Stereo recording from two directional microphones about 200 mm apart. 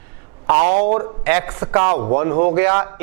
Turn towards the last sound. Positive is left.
turn(degrees=-15)  # may be behind; listen again after turning